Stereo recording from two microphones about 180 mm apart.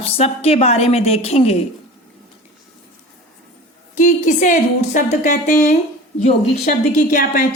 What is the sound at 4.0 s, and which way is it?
A woman's voice, 45° left (ahead or behind).